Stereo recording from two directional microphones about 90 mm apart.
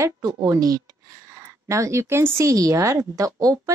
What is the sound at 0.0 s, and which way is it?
Speech, 40° right (ahead or behind).